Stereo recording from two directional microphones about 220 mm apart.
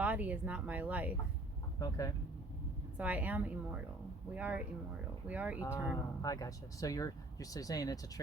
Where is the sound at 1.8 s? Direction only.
15° left (ahead or behind).